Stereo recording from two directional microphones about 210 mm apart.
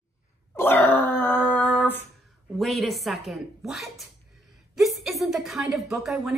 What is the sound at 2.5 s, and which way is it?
A woman's voice, centre (ahead or behind).